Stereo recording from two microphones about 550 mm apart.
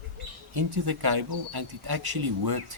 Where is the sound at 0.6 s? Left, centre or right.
Right.